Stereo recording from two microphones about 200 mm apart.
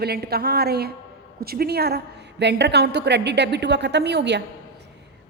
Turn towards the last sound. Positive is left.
turn(degrees=-55)  # may be behind; listen again after turning